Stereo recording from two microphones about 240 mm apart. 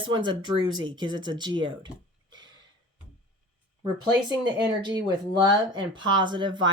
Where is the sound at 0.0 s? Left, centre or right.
Centre.